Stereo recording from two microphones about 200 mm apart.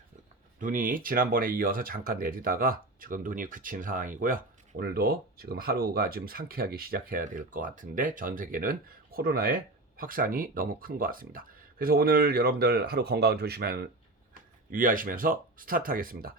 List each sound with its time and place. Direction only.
0.6 s speech: 40° right (ahead or behind)